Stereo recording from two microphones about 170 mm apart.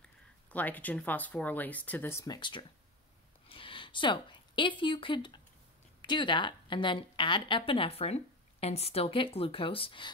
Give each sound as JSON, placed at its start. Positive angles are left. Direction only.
{"t": 0.0, "sound": "a woman's voice", "side_deg": 10}